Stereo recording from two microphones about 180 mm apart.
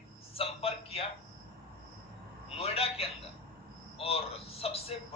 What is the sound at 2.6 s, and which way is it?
A man's voice, 35° left (ahead or behind).